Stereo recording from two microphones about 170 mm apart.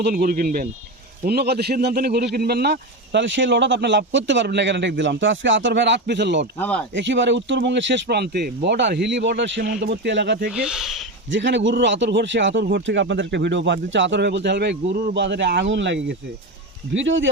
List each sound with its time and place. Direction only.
0.0 s a man's voice: 60° right (ahead or behind); by 6.4 s 90° right
6.6 s speech: 5° left (ahead or behind)
6.9 s speech: 90° right
10.5 s speech: 5° right (ahead or behind)
11.3 s speech: 90° right